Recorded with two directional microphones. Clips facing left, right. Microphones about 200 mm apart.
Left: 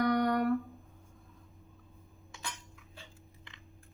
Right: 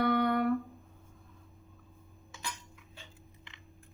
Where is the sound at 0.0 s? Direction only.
40° left (ahead or behind).